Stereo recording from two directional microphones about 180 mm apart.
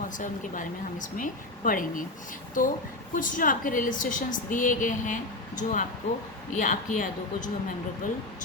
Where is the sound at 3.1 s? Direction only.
50° left (ahead or behind).